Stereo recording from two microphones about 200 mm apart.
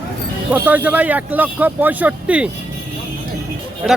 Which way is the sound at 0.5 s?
10° right (ahead or behind).